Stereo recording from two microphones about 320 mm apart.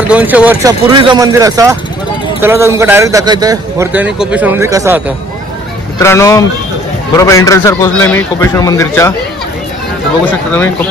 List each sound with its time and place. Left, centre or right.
0.1 s a man's voice: centre
5.9 s a man's voice: centre